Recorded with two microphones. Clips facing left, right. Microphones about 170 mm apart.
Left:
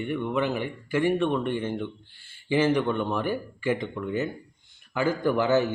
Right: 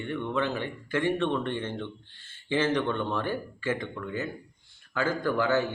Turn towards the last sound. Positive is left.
turn(degrees=20)  # may be behind; listen again after turning